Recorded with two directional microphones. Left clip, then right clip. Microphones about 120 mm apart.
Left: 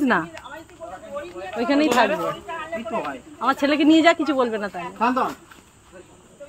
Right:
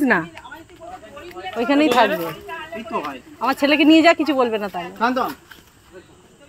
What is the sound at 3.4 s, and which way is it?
Speech, 25° right (ahead or behind).